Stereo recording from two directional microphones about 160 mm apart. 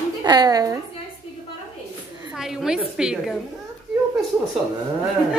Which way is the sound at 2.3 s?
Centre (ahead or behind).